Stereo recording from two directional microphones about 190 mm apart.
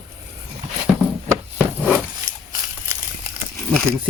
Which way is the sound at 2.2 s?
20° right (ahead or behind).